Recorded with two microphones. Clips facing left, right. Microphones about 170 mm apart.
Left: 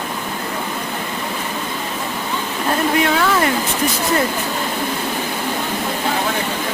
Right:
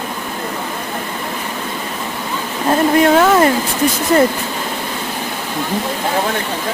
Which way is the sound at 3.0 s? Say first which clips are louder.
Right 6 dB; 45° right (ahead or behind).